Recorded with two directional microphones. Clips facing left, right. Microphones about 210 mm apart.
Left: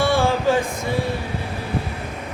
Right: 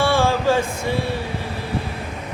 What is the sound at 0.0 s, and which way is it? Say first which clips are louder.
Music: even; 15° left (ahead or behind).